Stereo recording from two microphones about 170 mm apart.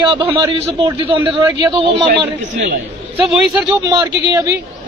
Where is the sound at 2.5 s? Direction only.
50° right (ahead or behind).